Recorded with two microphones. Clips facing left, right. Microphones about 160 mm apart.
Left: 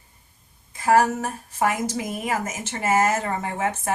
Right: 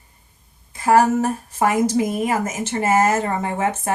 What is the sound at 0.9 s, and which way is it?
Speech, 35° right (ahead or behind).